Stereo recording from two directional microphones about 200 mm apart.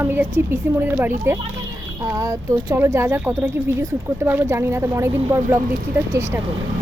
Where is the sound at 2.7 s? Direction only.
15° right (ahead or behind).